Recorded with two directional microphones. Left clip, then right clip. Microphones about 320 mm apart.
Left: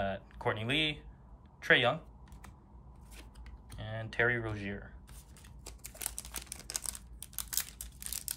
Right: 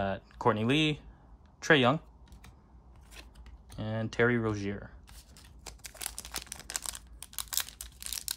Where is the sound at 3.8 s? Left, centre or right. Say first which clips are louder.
Right 3 dB; centre.